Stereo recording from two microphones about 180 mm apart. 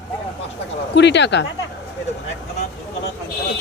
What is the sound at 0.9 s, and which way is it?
Speech, 75° left (ahead or behind).